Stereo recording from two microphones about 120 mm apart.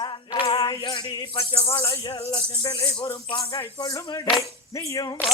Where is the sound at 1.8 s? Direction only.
45° left (ahead or behind).